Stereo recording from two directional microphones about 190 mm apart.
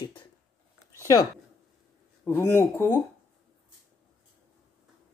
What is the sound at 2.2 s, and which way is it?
Speech, 15° left (ahead or behind).